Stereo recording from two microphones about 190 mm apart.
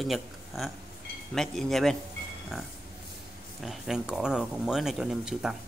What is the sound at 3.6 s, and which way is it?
Speech, centre (ahead or behind).